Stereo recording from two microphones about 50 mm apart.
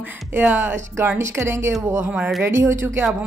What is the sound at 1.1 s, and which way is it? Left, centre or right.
A woman's voice, right.